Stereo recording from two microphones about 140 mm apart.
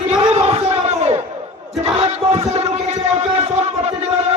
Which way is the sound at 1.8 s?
50° right (ahead or behind).